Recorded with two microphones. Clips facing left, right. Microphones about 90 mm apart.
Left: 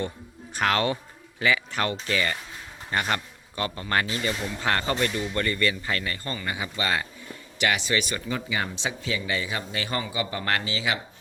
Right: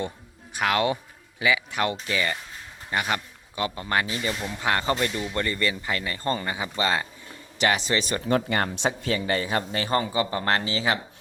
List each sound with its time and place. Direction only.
0.5 s a man's voice: 10° right (ahead or behind)
7.6 s speech: 35° right (ahead or behind)
8.3 s speech: 55° right (ahead or behind); by 11.0 s 35° right (ahead or behind)